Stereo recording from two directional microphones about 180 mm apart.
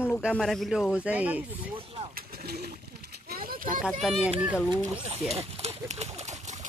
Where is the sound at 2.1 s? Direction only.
60° right (ahead or behind).